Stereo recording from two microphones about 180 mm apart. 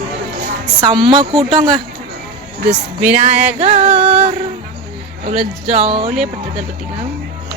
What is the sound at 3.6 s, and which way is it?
Music, 35° right (ahead or behind).